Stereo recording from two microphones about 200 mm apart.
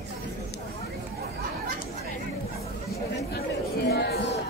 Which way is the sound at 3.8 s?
55° left (ahead or behind).